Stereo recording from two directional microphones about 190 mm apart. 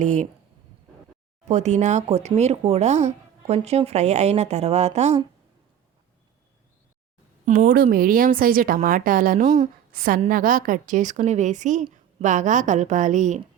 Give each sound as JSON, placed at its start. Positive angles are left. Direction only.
{"t": 0.0, "sound": "speech", "side_deg": -40}
{"t": 1.5, "sound": "speech", "side_deg": -40}
{"t": 7.4, "sound": "a woman's voice", "side_deg": -45}